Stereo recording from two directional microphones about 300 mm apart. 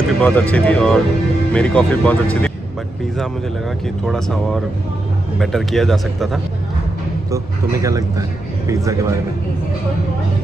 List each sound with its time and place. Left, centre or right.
0.2 s speech: centre
4.0 s speech: centre
7.2 s a man's voice: centre